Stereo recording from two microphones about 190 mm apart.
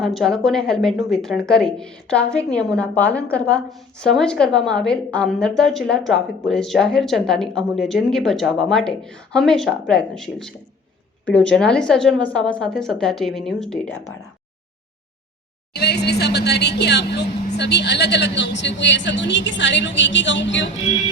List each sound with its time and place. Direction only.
0.0 s a woman's voice: centre (ahead or behind)
15.7 s a woman's voice: 60° left (ahead or behind)